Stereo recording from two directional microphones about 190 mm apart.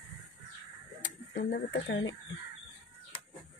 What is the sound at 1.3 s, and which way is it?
Speech, 60° left (ahead or behind).